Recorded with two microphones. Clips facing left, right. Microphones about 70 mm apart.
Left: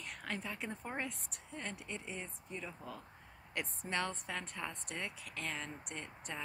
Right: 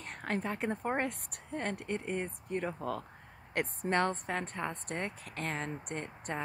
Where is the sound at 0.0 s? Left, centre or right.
Right.